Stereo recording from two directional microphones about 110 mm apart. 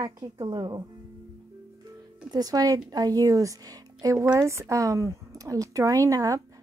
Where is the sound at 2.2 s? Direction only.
35° right (ahead or behind).